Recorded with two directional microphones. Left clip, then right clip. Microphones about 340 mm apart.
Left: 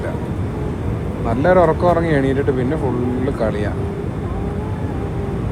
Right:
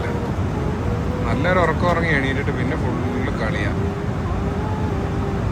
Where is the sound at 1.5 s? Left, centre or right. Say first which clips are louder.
Left 6 dB; centre.